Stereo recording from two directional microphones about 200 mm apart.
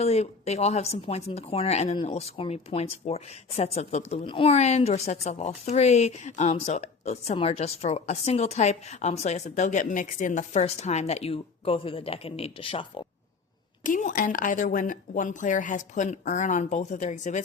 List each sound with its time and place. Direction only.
0.0 s speech: 30° left (ahead or behind)
13.8 s speech: 40° left (ahead or behind)